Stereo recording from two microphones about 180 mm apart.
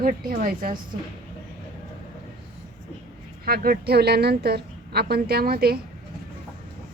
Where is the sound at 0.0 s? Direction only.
50° right (ahead or behind).